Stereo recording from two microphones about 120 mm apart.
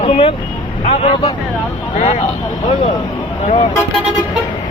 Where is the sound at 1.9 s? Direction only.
75° left (ahead or behind).